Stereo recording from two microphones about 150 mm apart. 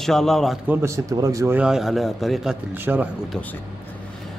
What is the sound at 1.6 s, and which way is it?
A man's voice, 5° right (ahead or behind).